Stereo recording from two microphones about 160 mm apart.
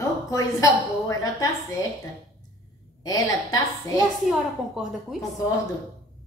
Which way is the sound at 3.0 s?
20° left (ahead or behind).